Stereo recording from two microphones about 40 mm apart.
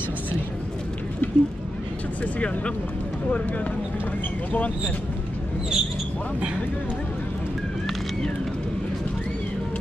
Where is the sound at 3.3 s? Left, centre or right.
Left.